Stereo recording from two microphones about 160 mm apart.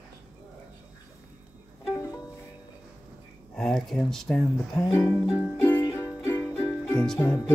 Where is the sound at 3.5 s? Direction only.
5° left (ahead or behind).